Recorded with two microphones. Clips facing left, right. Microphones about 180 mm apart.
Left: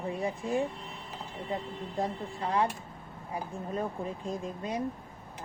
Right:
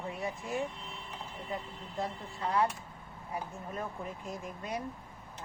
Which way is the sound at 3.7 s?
30° left (ahead or behind).